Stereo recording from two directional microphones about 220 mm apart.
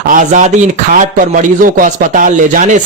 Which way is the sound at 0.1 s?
35° right (ahead or behind).